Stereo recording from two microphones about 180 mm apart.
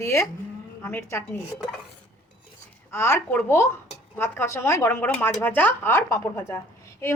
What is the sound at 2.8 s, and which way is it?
A woman's voice, 15° left (ahead or behind).